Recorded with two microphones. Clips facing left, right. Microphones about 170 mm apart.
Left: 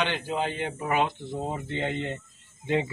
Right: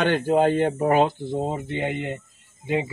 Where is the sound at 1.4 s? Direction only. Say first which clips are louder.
Right 4 dB; 15° right (ahead or behind).